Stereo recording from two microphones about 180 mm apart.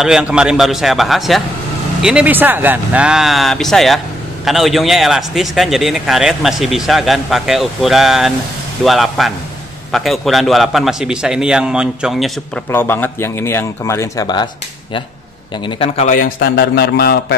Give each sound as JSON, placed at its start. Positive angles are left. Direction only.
{"t": 0.0, "sound": "a man's voice", "side_deg": -5}
{"t": 12.7, "sound": "a man's voice", "side_deg": 10}
{"t": 15.6, "sound": "a man's voice", "side_deg": 30}
{"t": 16.1, "sound": "a man's voice", "side_deg": 55}